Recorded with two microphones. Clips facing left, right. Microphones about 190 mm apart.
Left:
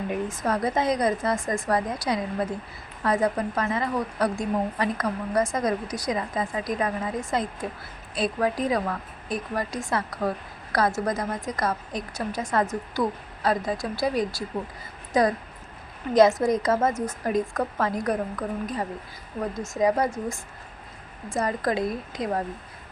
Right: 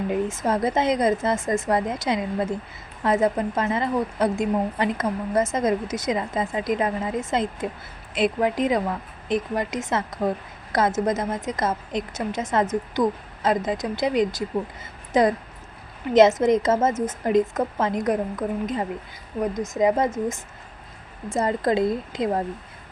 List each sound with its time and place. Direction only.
0.1 s a woman's voice: 25° right (ahead or behind)